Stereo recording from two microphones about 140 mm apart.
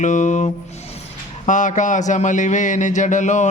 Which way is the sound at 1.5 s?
65° left (ahead or behind).